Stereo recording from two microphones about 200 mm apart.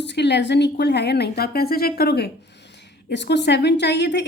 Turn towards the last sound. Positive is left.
turn(degrees=60)  # may be behind; listen again after turning